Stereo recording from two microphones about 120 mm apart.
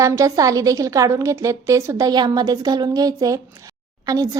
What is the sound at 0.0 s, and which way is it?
A woman's voice, 25° right (ahead or behind).